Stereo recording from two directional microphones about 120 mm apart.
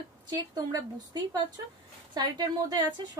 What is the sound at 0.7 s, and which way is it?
A woman's voice, 35° right (ahead or behind).